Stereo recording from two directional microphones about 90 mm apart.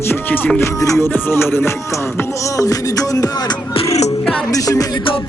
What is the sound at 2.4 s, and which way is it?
Music, 40° left (ahead or behind).